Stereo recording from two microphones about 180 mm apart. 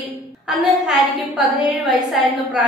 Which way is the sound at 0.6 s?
5° right (ahead or behind).